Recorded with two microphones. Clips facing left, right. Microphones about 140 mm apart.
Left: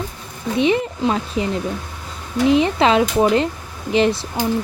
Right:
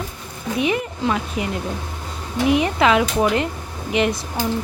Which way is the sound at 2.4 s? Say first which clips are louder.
Left 2 dB; 30° left (ahead or behind).